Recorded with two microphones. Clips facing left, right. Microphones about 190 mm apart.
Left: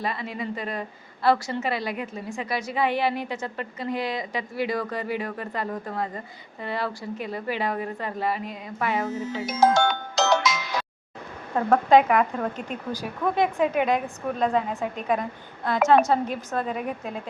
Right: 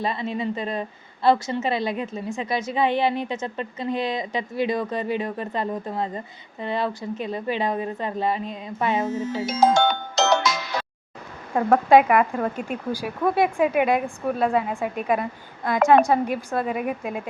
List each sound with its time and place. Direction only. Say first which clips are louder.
0.0 s a woman's voice: right 4 dB; 25° right (ahead or behind)
10.5 s music: right 1 dB; centre (ahead or behind)
11.5 s speech: right 2 dB; 10° right (ahead or behind)